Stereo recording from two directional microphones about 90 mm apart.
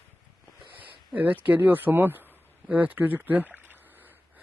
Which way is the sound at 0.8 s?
15° right (ahead or behind).